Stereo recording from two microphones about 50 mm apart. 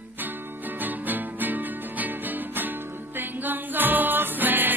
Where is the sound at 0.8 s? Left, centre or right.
Right.